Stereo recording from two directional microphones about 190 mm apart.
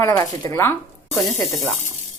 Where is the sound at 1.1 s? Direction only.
Centre (ahead or behind).